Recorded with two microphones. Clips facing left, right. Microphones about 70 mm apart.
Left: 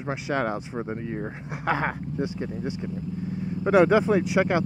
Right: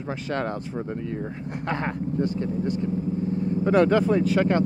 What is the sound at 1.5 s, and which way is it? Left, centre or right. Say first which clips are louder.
Speech: left 3 dB; centre.